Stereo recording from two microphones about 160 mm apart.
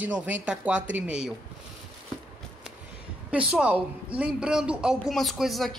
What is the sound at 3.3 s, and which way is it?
A woman's voice, 5° right (ahead or behind).